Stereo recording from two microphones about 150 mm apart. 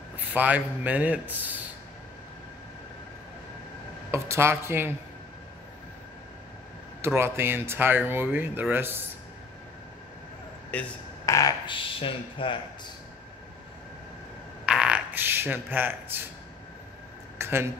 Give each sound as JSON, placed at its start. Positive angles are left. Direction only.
{"t": 0.3, "sound": "speech", "side_deg": -10}
{"t": 4.1, "sound": "speech", "side_deg": -15}
{"t": 7.2, "sound": "speech", "side_deg": -15}
{"t": 10.7, "sound": "speech", "side_deg": 10}
{"t": 11.2, "sound": "speech", "side_deg": 20}
{"t": 11.6, "sound": "speech", "side_deg": 35}
{"t": 14.7, "sound": "a sound", "side_deg": -5}
{"t": 17.4, "sound": "a sound", "side_deg": -15}